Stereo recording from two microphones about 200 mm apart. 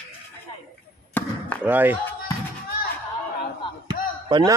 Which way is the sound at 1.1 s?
5° left (ahead or behind).